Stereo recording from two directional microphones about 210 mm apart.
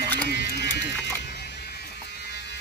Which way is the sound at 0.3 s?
50° left (ahead or behind).